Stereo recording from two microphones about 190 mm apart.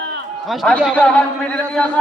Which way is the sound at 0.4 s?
Centre (ahead or behind).